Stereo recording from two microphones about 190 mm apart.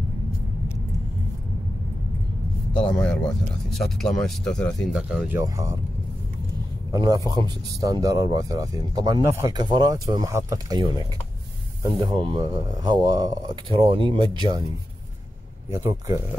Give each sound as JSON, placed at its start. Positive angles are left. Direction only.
{"t": 2.7, "sound": "speech", "side_deg": 5}
{"t": 5.4, "sound": "speech", "side_deg": -15}
{"t": 6.9, "sound": "a man's voice", "side_deg": -20}
{"t": 12.1, "sound": "speech", "side_deg": -25}
{"t": 15.7, "sound": "speech", "side_deg": -15}